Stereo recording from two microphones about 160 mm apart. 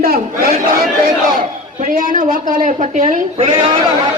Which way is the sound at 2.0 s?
60° right (ahead or behind).